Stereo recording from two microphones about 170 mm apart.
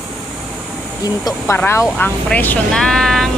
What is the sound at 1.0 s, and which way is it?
Speech, 20° left (ahead or behind).